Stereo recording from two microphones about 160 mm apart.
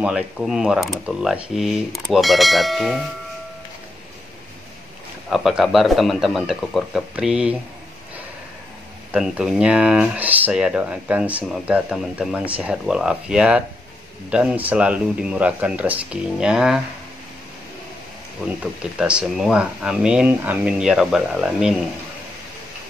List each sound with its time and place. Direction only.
0.0 s speech: 5° right (ahead or behind)
5.3 s speech: centre (ahead or behind)
9.1 s speech: 5° right (ahead or behind)
18.6 s speech: 5° right (ahead or behind)